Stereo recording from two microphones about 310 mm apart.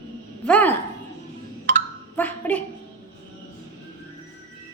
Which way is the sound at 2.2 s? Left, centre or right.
Centre.